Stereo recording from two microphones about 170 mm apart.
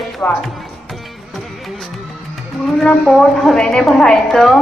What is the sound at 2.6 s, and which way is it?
A woman's voice, centre (ahead or behind).